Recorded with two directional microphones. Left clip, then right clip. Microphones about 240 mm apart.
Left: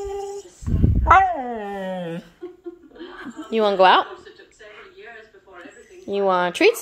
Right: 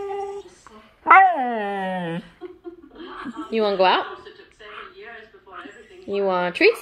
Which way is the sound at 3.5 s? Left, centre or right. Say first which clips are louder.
Left 4 dB; centre.